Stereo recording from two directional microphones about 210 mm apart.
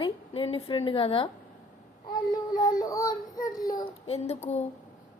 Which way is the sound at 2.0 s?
20° left (ahead or behind).